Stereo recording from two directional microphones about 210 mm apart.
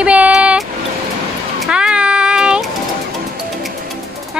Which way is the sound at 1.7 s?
5° right (ahead or behind).